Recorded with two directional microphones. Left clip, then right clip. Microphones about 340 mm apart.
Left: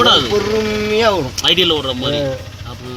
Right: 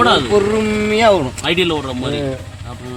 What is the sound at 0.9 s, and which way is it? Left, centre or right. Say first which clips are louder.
Speech: right 3 dB; right.